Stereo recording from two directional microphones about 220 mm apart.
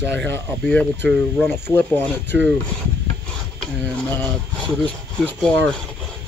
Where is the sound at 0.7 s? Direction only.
5° left (ahead or behind).